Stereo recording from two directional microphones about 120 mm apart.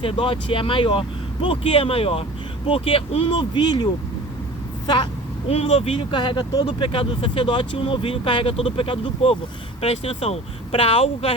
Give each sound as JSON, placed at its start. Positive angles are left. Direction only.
{"t": 0.0, "sound": "speech", "side_deg": 45}
{"t": 5.5, "sound": "speech", "side_deg": 60}